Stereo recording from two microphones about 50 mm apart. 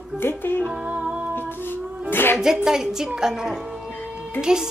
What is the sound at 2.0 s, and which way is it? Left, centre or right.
Music, left.